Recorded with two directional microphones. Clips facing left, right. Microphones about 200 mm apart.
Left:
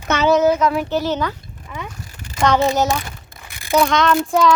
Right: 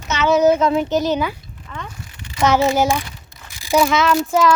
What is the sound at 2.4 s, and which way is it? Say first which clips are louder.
Speech: right 1 dB; 5° right (ahead or behind).